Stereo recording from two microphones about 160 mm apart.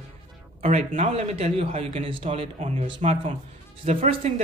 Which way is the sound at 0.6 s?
45° right (ahead or behind).